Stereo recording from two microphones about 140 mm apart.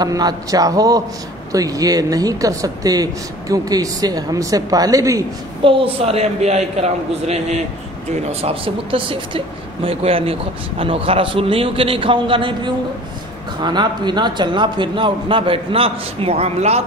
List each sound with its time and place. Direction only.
0.0 s speech: 30° right (ahead or behind)
5.6 s a man's voice: 40° right (ahead or behind)